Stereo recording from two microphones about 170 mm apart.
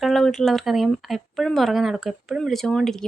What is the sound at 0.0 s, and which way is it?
Speech, centre (ahead or behind).